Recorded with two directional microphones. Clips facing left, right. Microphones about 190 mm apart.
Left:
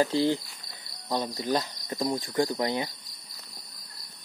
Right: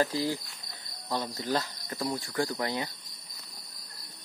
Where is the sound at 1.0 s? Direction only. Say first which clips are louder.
Left 3 dB; 15° left (ahead or behind).